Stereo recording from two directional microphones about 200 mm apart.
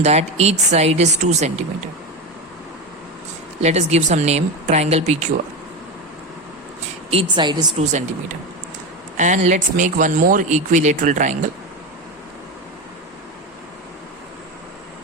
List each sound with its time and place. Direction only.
0.0 s speech: 35° right (ahead or behind)
3.6 s speech: 35° right (ahead or behind)
7.1 s a woman's voice: 25° right (ahead or behind)
9.1 s speech: 35° right (ahead or behind)